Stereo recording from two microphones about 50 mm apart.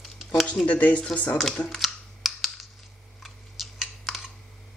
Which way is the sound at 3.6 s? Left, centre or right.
Centre.